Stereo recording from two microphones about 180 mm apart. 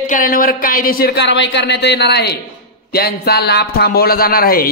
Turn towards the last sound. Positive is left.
turn(degrees=55)  # may be behind; listen again after turning